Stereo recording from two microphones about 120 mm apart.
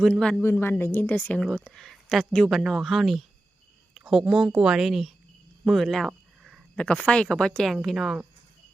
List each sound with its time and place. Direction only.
0.0 s speech: 5° left (ahead or behind)
0.4 s speech: 20° left (ahead or behind); by 5.1 s centre (ahead or behind)
5.6 s a sound: centre (ahead or behind)
6.7 s speech: 10° left (ahead or behind)